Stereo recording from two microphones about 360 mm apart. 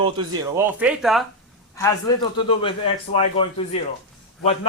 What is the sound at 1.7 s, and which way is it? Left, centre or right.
A man's voice, centre.